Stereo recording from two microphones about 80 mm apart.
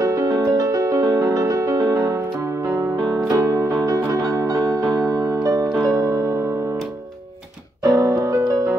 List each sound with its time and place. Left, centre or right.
0.0 s music: right
7.8 s music: right